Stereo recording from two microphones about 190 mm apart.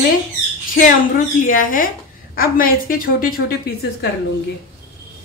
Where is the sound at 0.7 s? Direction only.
45° left (ahead or behind).